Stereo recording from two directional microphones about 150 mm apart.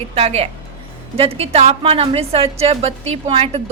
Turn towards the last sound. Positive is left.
turn(degrees=-40)  # may be behind; listen again after turning